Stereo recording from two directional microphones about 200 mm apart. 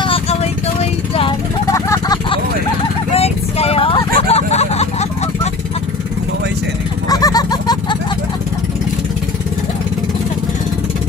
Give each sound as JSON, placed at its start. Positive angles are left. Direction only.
{"t": 0.0, "sound": "vehicle", "side_deg": 30}
{"t": 1.7, "sound": "vehicle", "side_deg": 15}
{"t": 7.1, "sound": "a sound", "side_deg": 20}